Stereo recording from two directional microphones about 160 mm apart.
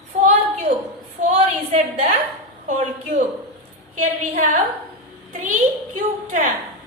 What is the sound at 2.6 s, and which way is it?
A woman's voice, 50° right (ahead or behind).